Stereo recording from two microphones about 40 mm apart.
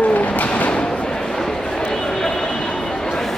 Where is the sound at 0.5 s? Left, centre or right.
Left.